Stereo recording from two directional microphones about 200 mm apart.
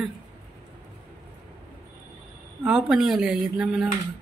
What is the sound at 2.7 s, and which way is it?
Speech, 5° right (ahead or behind).